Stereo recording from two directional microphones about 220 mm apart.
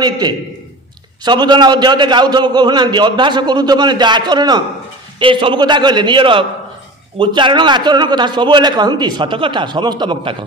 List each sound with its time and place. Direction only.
0.2 s a man's voice: 20° right (ahead or behind)